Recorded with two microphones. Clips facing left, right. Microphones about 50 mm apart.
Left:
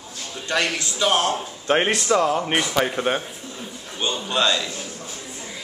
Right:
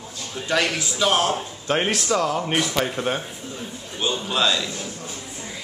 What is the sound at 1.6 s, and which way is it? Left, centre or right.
Speech, centre.